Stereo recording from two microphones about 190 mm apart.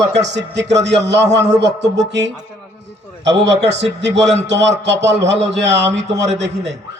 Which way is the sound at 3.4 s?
65° right (ahead or behind).